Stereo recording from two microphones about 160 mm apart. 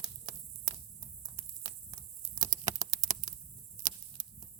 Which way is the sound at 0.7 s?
25° right (ahead or behind).